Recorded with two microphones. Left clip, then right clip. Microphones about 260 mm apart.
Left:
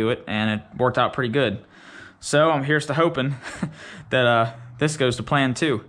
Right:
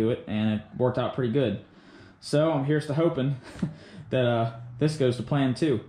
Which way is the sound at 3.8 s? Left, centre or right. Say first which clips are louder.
Left 9 dB; left.